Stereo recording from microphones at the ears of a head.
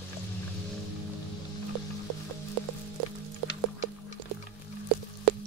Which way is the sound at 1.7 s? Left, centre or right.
Right.